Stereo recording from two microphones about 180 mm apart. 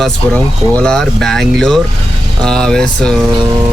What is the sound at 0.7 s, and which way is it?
Speech, 5° left (ahead or behind).